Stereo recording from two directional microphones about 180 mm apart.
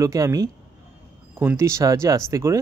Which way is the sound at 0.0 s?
20° right (ahead or behind).